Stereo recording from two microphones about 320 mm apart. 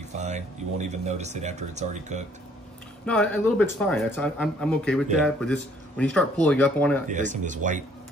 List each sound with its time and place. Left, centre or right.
0.1 s speech: right
3.1 s speech: centre
7.1 s speech: right